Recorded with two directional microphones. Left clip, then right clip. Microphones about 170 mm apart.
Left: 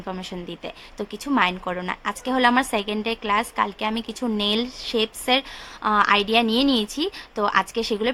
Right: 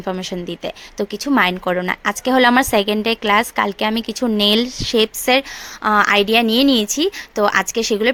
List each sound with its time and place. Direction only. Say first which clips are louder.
0.0 s a woman's voice: right 8 dB; 35° right (ahead or behind)